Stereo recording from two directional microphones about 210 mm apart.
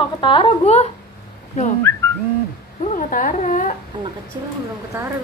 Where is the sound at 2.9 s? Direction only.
40° left (ahead or behind).